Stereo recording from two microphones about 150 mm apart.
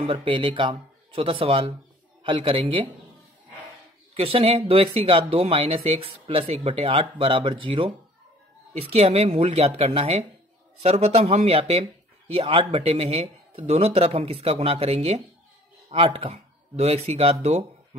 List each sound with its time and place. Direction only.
0.0 s speech: 35° right (ahead or behind)
4.1 s speech: 40° right (ahead or behind)